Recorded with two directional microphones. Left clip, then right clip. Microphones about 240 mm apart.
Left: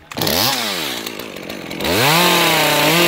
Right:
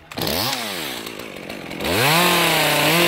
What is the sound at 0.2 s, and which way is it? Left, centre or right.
Chainsaw, left.